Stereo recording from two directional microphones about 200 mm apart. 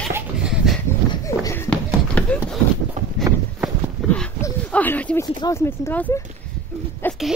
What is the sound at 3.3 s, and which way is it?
Walk, 15° right (ahead or behind).